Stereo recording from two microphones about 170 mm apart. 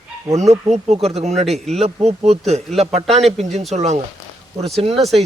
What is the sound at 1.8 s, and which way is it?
Speech, 40° right (ahead or behind).